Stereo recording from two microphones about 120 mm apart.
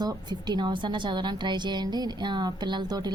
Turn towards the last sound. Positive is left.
turn(degrees=-35)  # may be behind; listen again after turning